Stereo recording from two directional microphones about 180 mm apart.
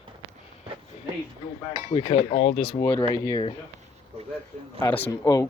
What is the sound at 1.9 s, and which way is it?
Speech, 30° left (ahead or behind).